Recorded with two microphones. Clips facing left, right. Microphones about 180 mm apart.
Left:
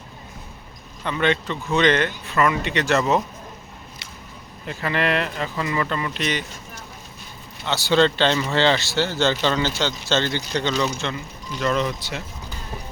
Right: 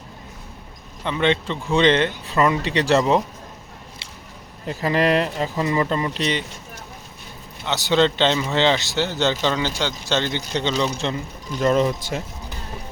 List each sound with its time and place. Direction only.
1.0 s speech: 25° right (ahead or behind)
4.6 s speech: 35° right (ahead or behind)
7.6 s speech: 20° right (ahead or behind)
10.9 s speech: 35° right (ahead or behind)